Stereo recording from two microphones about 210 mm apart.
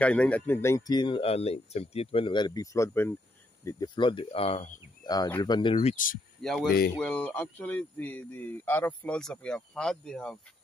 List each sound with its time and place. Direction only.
0.0 s speech: 5° left (ahead or behind); by 6.1 s 35° left (ahead or behind)
6.4 s speech: centre (ahead or behind)